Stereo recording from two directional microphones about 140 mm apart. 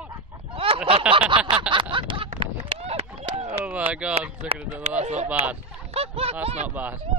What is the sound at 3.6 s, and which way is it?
Speech, 10° right (ahead or behind).